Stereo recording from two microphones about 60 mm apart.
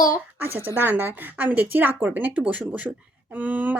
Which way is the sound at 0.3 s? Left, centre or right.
Right.